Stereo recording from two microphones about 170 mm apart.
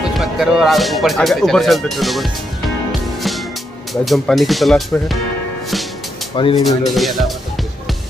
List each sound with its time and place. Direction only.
0.1 s speech: centre (ahead or behind)
3.2 s music: centre (ahead or behind)
3.9 s speech: centre (ahead or behind)
6.3 s speech: 30° left (ahead or behind)
6.9 s speech: centre (ahead or behind)